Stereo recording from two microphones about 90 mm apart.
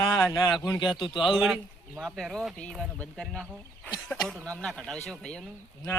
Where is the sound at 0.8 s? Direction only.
65° left (ahead or behind).